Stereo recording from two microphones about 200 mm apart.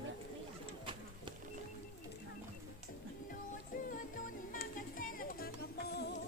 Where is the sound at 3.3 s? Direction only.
40° left (ahead or behind).